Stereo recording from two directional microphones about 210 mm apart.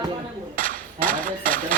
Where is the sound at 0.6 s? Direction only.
40° right (ahead or behind).